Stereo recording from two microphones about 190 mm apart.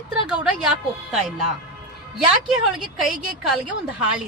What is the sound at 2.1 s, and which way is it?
Speech, 5° right (ahead or behind).